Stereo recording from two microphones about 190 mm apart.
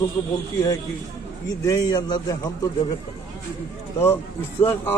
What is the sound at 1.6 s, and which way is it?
A man's voice, 20° left (ahead or behind).